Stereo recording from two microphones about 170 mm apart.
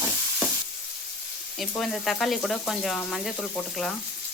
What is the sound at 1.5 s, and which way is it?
Frying, centre (ahead or behind).